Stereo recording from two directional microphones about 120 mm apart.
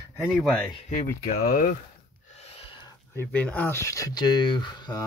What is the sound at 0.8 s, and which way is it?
Speech, 80° left.